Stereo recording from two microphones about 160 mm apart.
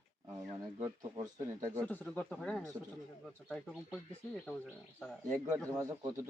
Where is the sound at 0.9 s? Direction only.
30° right (ahead or behind).